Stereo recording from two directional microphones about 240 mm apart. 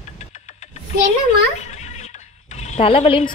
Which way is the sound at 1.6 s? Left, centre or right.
Left.